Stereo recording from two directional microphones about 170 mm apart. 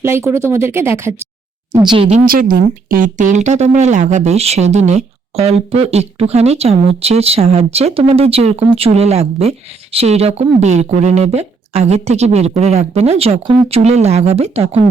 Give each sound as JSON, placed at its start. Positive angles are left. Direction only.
{"t": 0.0, "sound": "speech", "side_deg": -15}
{"t": 1.7, "sound": "speech", "side_deg": -25}
{"t": 2.2, "sound": "speech", "side_deg": -55}